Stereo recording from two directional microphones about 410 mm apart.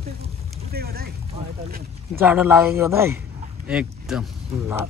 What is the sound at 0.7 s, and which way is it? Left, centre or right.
Boat, right.